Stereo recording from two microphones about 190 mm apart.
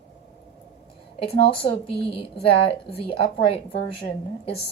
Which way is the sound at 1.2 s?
30° left (ahead or behind).